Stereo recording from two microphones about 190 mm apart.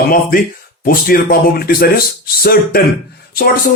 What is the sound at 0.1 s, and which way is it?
Speech, 50° left (ahead or behind).